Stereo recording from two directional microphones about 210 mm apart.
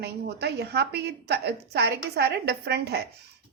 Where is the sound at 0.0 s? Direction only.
50° right (ahead or behind).